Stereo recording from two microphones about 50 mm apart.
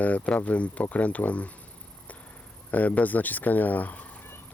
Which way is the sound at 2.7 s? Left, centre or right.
Left.